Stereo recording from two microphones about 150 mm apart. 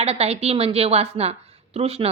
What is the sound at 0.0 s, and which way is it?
A woman's voice, 45° right (ahead or behind).